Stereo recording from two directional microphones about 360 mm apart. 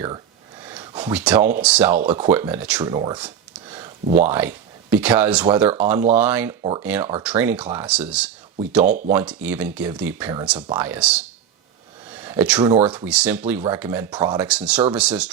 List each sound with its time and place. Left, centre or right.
0.6 s speech: centre
6.6 s speech: centre
6.8 s speech: centre